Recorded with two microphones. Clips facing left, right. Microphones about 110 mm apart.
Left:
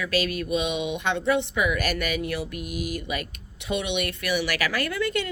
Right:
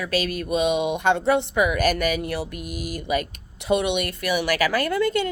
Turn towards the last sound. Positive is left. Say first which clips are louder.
# right 5 dB
turn(degrees=-40)  # may be behind; listen again after turning